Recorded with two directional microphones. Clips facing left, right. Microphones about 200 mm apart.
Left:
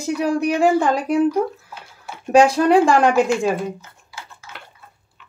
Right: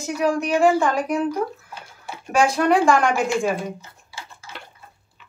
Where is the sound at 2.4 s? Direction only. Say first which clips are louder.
Left 4 dB; 35° left (ahead or behind).